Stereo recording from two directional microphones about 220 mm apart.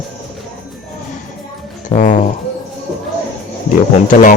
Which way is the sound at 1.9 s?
35° left (ahead or behind).